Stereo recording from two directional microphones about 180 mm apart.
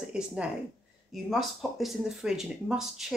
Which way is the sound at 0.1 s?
5° right (ahead or behind).